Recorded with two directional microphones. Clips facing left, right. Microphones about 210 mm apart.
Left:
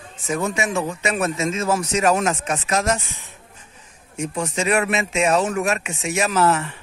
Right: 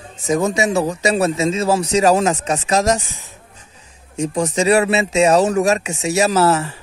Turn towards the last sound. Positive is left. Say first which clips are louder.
# right 4 dB
turn(degrees=-35)  # may be behind; listen again after turning